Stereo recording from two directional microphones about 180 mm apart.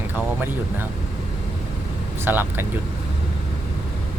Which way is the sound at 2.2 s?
10° right (ahead or behind).